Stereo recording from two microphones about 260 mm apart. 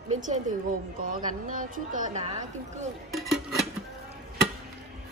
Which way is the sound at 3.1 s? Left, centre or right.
Centre.